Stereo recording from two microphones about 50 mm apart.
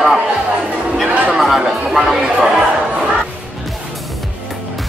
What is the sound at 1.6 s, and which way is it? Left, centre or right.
Music, centre.